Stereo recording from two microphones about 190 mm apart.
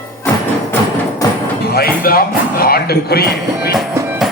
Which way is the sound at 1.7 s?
50° left (ahead or behind).